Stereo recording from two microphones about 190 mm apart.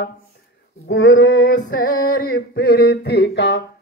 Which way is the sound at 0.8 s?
85° left.